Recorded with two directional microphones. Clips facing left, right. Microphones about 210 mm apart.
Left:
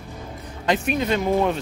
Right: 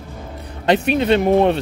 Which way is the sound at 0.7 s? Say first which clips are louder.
Right 6 dB; 70° right (ahead or behind).